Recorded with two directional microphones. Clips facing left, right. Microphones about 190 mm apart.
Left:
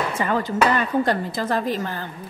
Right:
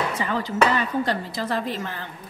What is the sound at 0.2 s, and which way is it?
Speech, 50° left (ahead or behind).